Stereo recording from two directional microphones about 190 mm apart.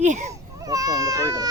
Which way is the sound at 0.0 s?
40° right (ahead or behind).